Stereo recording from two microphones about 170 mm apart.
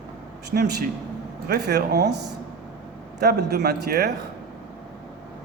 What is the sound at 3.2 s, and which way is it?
Speech, 75° right (ahead or behind).